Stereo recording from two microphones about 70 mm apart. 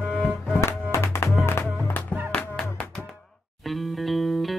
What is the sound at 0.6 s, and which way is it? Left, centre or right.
Music, left.